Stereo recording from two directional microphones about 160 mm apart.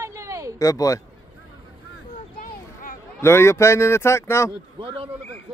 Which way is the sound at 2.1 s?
60° left (ahead or behind).